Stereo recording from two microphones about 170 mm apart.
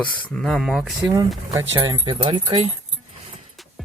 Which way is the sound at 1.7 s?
25° right (ahead or behind).